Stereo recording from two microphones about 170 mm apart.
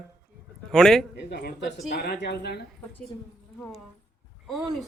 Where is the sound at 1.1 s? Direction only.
75° left (ahead or behind).